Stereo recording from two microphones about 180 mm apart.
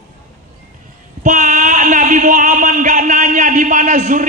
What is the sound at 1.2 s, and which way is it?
Speech, 45° right (ahead or behind).